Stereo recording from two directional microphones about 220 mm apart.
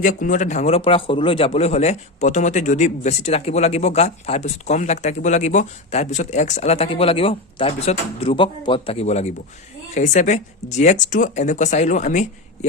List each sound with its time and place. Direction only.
0.0 s a man's voice: 35° left (ahead or behind)